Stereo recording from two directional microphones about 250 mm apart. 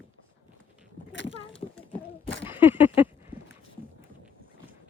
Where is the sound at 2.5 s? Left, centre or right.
Centre.